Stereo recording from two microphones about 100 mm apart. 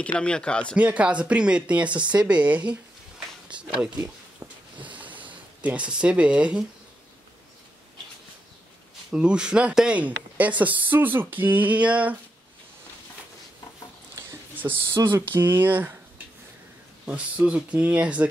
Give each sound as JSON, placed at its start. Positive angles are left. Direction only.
{"t": 0.0, "sound": "speech", "side_deg": 10}
{"t": 0.7, "sound": "speech", "side_deg": -15}
{"t": 4.4, "sound": "a sound", "side_deg": -20}
{"t": 4.7, "sound": "boat", "side_deg": -15}
{"t": 5.6, "sound": "speech", "side_deg": -15}
{"t": 9.1, "sound": "speech", "side_deg": -10}
{"t": 14.6, "sound": "speech", "side_deg": -20}
{"t": 17.0, "sound": "speech", "side_deg": -10}